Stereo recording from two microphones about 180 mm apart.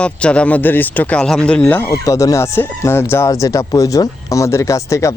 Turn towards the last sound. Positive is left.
turn(degrees=15)  # may be behind; listen again after turning